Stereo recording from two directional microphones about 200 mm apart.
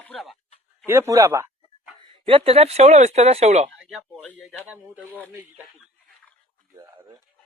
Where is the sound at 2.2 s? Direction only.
25° right (ahead or behind).